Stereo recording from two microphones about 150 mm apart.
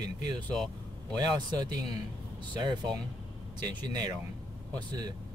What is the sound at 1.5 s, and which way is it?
Speech, 30° right (ahead or behind).